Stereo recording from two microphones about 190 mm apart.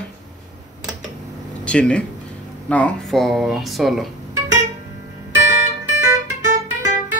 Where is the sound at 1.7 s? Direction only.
5° left (ahead or behind).